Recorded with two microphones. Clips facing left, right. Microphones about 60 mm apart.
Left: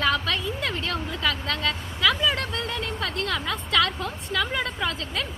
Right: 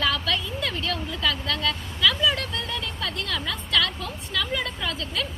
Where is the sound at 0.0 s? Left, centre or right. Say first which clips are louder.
Left 1 dB; left.